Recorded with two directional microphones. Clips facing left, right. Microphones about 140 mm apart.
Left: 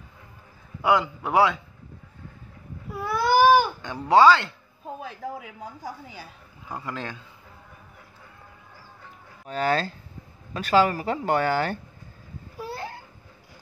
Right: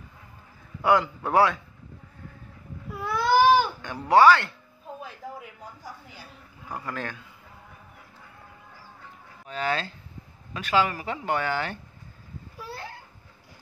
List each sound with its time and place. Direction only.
0.8 s a man's voice: 15° left (ahead or behind)
3.0 s baby cry: 5° left (ahead or behind)
3.8 s speech: 20° left (ahead or behind)
6.7 s speech: 20° left (ahead or behind)
9.5 s speech: 40° left (ahead or behind)